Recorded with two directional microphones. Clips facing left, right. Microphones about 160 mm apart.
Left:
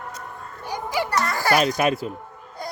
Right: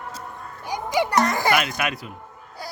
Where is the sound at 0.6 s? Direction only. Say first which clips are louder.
Right 3 dB; 15° right (ahead or behind).